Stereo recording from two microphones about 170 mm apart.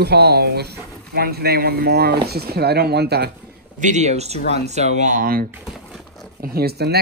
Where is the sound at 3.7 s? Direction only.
45° right (ahead or behind).